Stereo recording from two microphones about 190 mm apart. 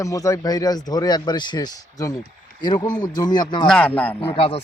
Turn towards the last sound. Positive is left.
turn(degrees=30)  # may be behind; listen again after turning